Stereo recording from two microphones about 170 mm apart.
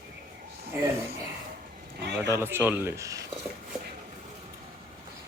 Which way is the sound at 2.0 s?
90° right.